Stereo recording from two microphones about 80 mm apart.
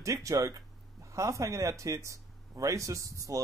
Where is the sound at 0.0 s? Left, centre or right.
Right.